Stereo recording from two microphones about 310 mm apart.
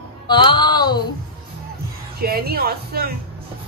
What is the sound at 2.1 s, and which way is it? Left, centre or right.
Speech, right.